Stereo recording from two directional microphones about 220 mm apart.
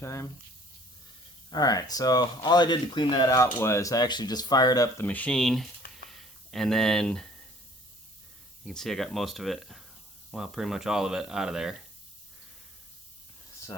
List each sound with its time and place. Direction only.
0.0 s speech: 10° left (ahead or behind)
1.5 s speech: 15° left (ahead or behind)
8.6 s speech: centre (ahead or behind)